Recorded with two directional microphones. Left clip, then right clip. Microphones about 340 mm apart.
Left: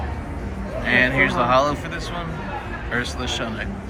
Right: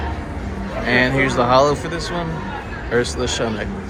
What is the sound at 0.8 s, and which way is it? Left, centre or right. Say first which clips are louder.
A man's voice: right 1 dB; centre.